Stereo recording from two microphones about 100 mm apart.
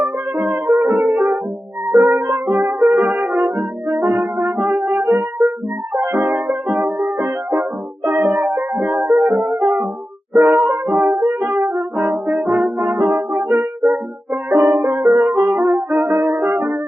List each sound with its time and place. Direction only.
0.0 s music: 5° right (ahead or behind)
2.5 s brass instrument: 5° right (ahead or behind)
5.4 s music: centre (ahead or behind)
11.3 s brass instrument: 5° right (ahead or behind)
14.5 s music: 45° right (ahead or behind)
14.8 s brass instrument: 5° right (ahead or behind)